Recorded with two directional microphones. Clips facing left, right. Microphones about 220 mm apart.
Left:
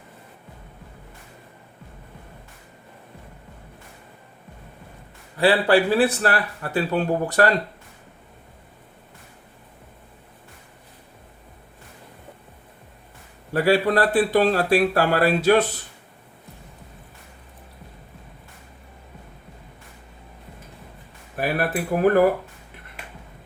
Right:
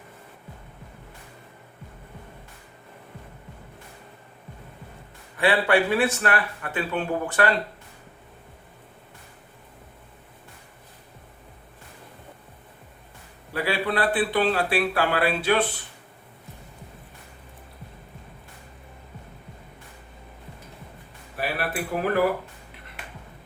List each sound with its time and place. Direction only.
5.4 s a man's voice: 35° left (ahead or behind)
13.5 s speech: 45° left (ahead or behind)
21.3 s speech: 50° left (ahead or behind)